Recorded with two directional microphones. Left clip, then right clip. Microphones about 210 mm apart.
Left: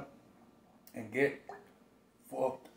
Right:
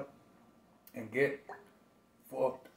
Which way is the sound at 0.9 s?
Centre (ahead or behind).